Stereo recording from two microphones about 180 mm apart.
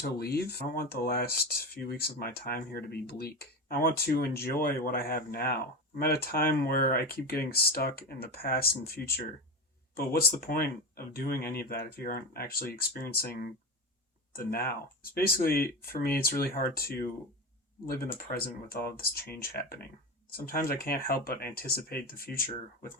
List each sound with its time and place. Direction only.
0.0 s speech: 60° left (ahead or behind)
15.9 s speech: 55° left (ahead or behind)